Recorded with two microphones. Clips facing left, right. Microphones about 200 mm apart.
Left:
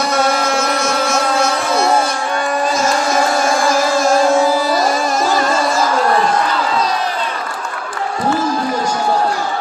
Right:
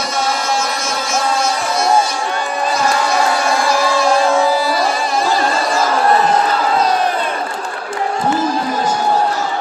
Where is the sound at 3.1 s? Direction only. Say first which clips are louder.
Left 1 dB; 45° left (ahead or behind).